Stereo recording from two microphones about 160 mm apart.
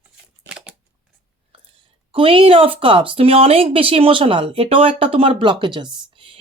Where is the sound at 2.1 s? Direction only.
35° right (ahead or behind).